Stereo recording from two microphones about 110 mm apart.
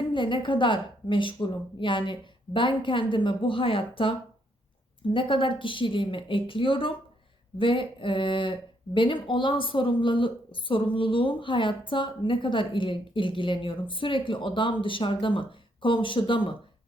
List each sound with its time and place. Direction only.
0.1 s a woman's voice: 50° left (ahead or behind)